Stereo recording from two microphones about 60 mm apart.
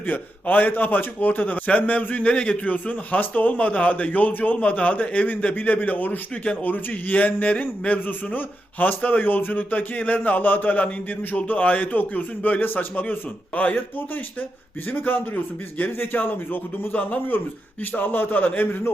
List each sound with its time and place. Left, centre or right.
0.1 s a man's voice: left
2.3 s a man's voice: centre
6.4 s a man's voice: centre
14.9 s a man's voice: left